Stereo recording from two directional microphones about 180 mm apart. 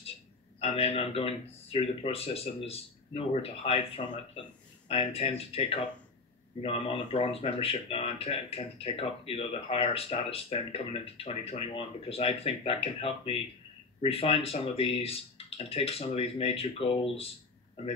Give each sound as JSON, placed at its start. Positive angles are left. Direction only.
{"t": 0.6, "sound": "speech", "side_deg": 35}